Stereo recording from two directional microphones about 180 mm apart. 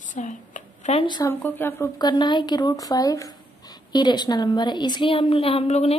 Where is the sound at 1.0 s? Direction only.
25° left (ahead or behind).